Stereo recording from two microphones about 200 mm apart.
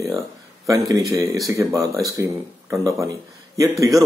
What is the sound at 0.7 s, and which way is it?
A man's voice, 15° right (ahead or behind).